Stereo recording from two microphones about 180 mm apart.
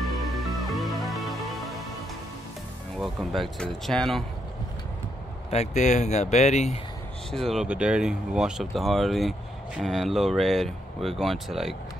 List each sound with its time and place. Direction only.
0.7 s music: centre (ahead or behind)
3.0 s speech: centre (ahead or behind)
5.5 s speech: 40° left (ahead or behind)
7.2 s speech: centre (ahead or behind)